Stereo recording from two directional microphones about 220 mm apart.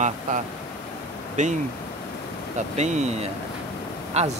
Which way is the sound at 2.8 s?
30° right (ahead or behind).